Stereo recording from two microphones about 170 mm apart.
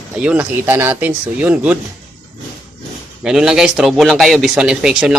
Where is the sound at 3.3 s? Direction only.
5° right (ahead or behind).